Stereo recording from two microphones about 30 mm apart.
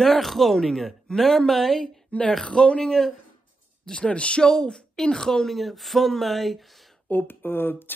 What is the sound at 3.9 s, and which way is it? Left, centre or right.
Speech, left.